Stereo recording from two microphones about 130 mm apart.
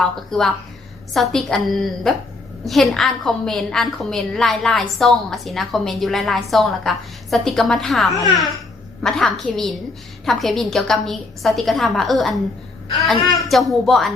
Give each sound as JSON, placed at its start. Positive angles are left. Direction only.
{"t": 0.0, "sound": "a woman's voice", "side_deg": 0}